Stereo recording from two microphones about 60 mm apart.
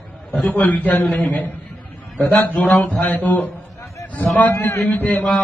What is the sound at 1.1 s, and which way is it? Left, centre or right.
Speech, centre.